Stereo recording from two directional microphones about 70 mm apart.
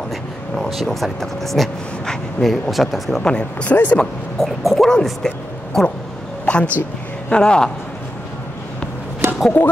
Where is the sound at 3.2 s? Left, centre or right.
Centre.